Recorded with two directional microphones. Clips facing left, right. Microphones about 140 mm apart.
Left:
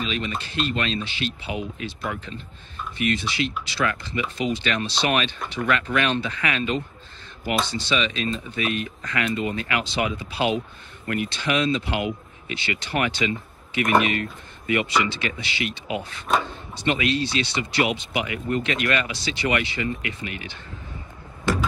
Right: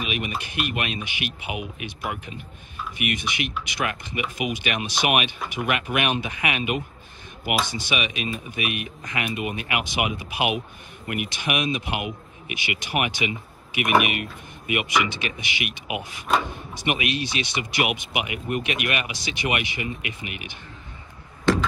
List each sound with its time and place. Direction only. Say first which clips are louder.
0.0 s speech: left 1 dB; 15° right (ahead or behind)